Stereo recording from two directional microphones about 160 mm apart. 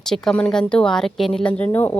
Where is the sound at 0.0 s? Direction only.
5° left (ahead or behind).